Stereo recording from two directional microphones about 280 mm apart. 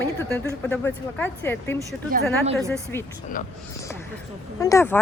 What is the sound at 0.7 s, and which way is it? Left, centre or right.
Speech, centre.